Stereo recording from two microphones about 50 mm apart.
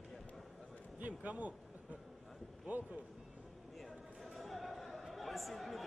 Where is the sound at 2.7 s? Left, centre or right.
Right.